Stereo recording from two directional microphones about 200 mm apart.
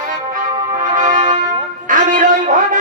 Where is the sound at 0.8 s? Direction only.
40° right (ahead or behind).